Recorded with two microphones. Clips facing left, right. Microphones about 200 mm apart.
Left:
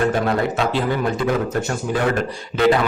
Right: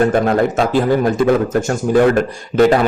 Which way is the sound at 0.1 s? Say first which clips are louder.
Right 5 dB; 50° right (ahead or behind).